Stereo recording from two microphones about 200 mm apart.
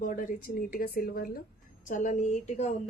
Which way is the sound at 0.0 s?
40° left (ahead or behind).